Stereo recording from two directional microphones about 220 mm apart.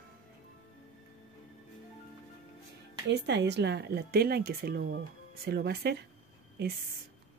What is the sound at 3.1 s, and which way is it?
Speech, 50° right (ahead or behind).